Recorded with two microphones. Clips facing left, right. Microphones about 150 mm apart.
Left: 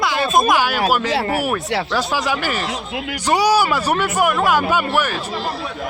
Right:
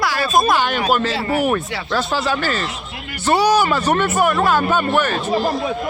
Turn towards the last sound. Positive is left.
turn(degrees=-65)  # may be behind; listen again after turning